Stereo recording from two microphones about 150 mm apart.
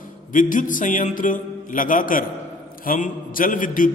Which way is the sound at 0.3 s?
60° left (ahead or behind).